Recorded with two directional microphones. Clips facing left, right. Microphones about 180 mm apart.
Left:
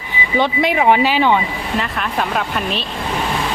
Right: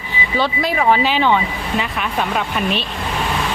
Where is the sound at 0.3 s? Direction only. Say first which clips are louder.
Left 3 dB; 20° left (ahead or behind).